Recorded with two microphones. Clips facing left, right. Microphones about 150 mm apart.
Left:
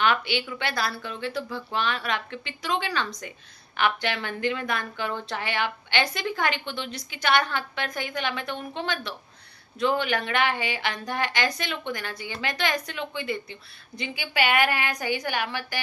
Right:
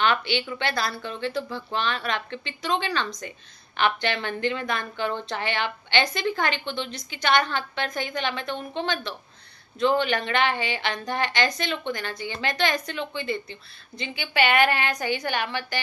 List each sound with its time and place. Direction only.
0.0 s a woman's voice: 5° left (ahead or behind)